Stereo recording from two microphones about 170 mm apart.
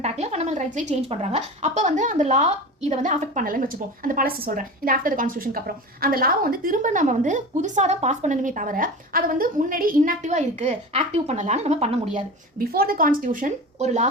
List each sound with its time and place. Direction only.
0.0 s a woman's voice: 40° right (ahead or behind)
12.5 s a woman's voice: 60° right (ahead or behind); by 14.1 s 40° right (ahead or behind)